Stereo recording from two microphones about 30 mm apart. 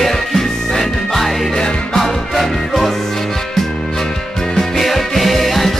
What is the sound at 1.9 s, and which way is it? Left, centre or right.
Music, centre.